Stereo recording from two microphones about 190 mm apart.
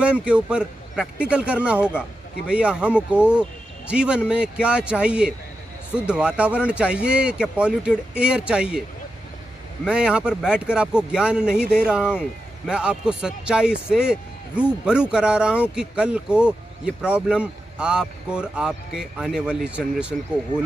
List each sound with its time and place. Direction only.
0.0 s speech: 5° right (ahead or behind)
9.8 s speech: 5° right (ahead or behind)